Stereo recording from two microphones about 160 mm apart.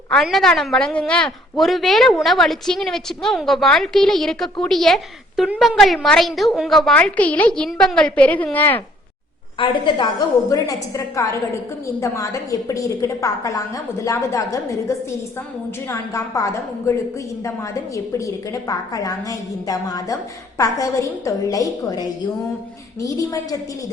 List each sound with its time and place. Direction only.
0.1 s a woman's voice: centre (ahead or behind)
9.6 s a woman's voice: 30° left (ahead or behind)